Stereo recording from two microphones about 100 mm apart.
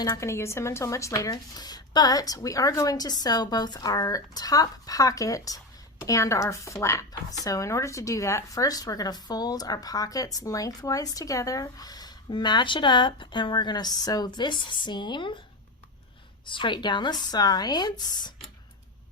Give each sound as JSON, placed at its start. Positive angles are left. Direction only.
{"t": 0.0, "sound": "speech", "side_deg": 30}
{"t": 16.5, "sound": "speech", "side_deg": 55}